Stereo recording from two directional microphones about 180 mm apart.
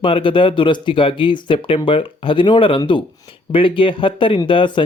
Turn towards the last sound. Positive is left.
turn(degrees=25)  # may be behind; listen again after turning